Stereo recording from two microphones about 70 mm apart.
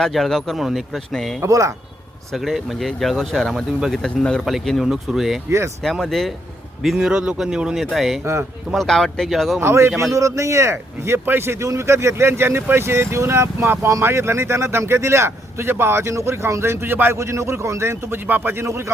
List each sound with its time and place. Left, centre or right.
0.0 s speech: centre
1.4 s a man's voice: right
2.3 s speech: centre
4.0 s speech: centre
5.5 s a man's voice: right
5.8 s speech: centre
6.8 s speech: centre
8.2 s speech: right
8.7 s speech: centre
9.6 s speech: right
10.0 s a man's voice: right
17.2 s speech: right
18.3 s a man's voice: right
18.6 s speech: right